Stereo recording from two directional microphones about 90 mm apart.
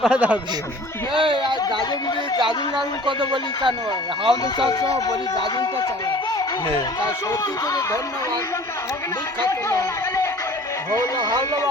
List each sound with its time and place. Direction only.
0.0 s a man's voice: 10° right (ahead or behind)
1.1 s speech: 65° right (ahead or behind)
4.7 s speech: 40° left (ahead or behind)
9.4 s speech: 35° left (ahead or behind)